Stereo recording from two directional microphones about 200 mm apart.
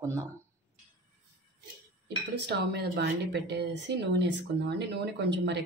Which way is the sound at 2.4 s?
60° right (ahead or behind).